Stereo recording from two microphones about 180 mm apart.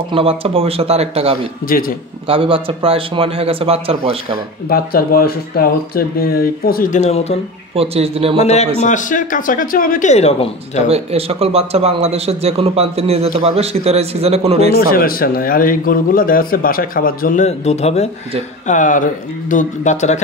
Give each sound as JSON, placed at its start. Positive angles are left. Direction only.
{"t": 0.1, "sound": "speech", "side_deg": -30}
{"t": 4.6, "sound": "speech", "side_deg": 55}
{"t": 7.7, "sound": "speech", "side_deg": -35}
{"t": 8.4, "sound": "speech", "side_deg": 40}
{"t": 10.9, "sound": "speech", "side_deg": -35}
{"t": 14.9, "sound": "speech", "side_deg": 55}